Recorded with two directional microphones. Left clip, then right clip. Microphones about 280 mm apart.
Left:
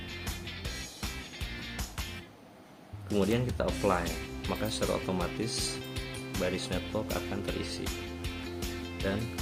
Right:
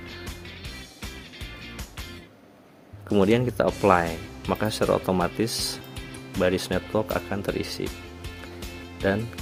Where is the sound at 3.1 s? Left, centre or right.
Right.